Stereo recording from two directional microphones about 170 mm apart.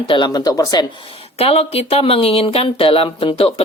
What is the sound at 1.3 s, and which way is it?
Speech, 35° left (ahead or behind).